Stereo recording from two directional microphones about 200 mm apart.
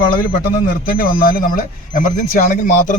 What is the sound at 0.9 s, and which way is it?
Speech, 45° left (ahead or behind).